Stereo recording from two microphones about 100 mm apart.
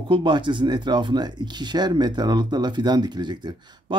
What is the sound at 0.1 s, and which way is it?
Speech, 50° right (ahead or behind).